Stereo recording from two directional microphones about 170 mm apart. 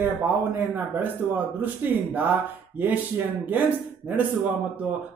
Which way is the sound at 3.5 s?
10° right (ahead or behind).